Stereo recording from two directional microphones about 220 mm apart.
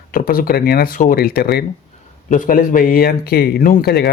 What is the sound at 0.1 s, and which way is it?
Speech, 40° left (ahead or behind).